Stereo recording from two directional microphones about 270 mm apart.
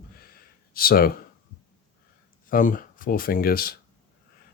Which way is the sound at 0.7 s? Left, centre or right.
Left.